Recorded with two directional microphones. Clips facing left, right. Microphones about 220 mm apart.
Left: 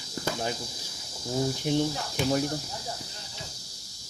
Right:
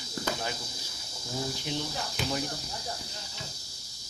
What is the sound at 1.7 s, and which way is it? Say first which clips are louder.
Speech: left 10 dB; 45° left (ahead or behind).